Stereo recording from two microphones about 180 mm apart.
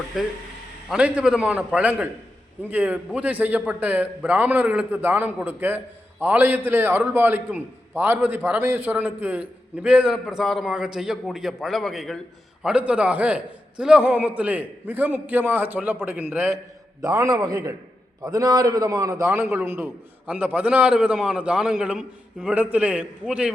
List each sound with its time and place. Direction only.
0.1 s a man's voice: centre (ahead or behind)
17.0 s a man's voice: 20° right (ahead or behind)